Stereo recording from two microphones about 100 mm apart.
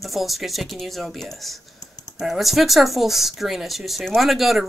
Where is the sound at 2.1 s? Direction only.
Centre (ahead or behind).